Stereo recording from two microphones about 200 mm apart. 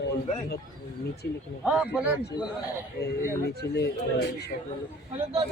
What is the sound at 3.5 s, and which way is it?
Speech, 55° left (ahead or behind).